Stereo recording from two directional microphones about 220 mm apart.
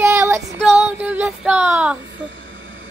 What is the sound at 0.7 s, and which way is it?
Child singing, 5° right (ahead or behind).